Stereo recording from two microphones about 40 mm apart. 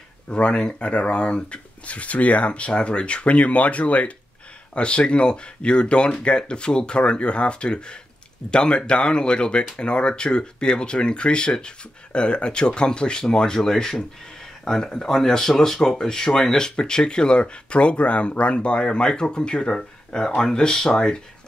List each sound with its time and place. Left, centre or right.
0.3 s speech: left
4.7 s speech: left